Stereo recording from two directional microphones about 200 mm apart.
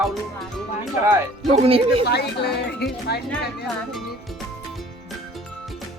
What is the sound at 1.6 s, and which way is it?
Speech, 30° right (ahead or behind).